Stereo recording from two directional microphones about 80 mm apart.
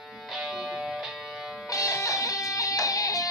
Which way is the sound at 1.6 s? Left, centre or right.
Left.